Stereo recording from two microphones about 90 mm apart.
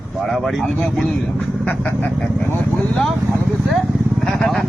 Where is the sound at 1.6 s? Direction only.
20° left (ahead or behind).